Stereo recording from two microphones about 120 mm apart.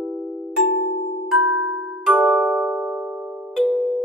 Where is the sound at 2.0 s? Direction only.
10° right (ahead or behind).